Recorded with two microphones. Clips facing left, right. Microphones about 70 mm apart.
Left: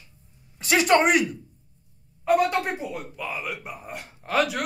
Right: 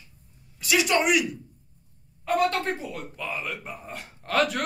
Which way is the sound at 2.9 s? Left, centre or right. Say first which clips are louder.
Left 1 dB; centre.